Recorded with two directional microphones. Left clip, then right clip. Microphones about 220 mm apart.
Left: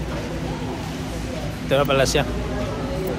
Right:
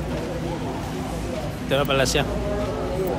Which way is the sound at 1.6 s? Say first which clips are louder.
Left 3 dB; 10° right (ahead or behind).